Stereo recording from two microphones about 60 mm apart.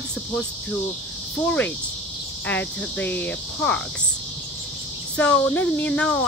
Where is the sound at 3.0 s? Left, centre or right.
Left.